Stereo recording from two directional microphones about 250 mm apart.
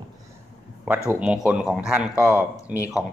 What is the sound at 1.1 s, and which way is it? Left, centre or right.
A man's voice, centre.